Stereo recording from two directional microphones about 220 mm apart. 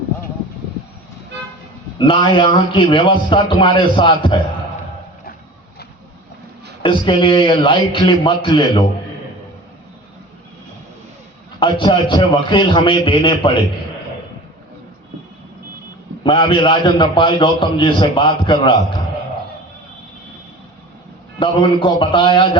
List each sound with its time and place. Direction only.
2.0 s a man's voice: 20° left (ahead or behind)
6.8 s a man's voice: 20° left (ahead or behind)
11.6 s a man's voice: 20° left (ahead or behind)
16.2 s a man's voice: 20° left (ahead or behind)
21.3 s a man's voice: 20° left (ahead or behind)